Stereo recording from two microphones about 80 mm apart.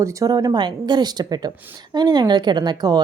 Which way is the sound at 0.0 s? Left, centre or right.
Right.